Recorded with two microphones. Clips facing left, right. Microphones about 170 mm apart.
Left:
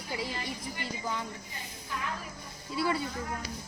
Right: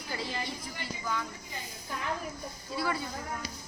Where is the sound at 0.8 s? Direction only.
25° left (ahead or behind).